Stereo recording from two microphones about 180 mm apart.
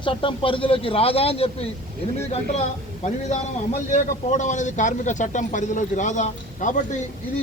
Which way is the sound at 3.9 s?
40° left (ahead or behind).